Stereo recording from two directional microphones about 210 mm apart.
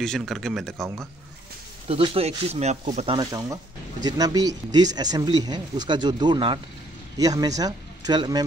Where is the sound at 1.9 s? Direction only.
25° right (ahead or behind).